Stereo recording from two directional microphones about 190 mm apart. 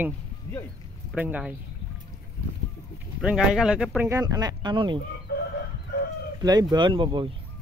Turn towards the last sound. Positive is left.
turn(degrees=-25)  # may be behind; listen again after turning